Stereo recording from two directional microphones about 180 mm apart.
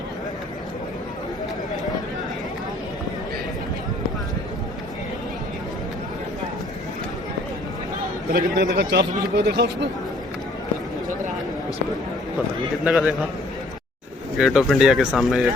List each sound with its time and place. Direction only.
8.3 s a man's voice: 60° right (ahead or behind)
12.8 s speech: 5° right (ahead or behind)
14.3 s speech: 5° right (ahead or behind)